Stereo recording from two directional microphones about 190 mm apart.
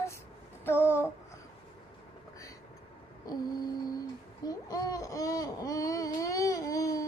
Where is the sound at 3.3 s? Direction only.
20° left (ahead or behind).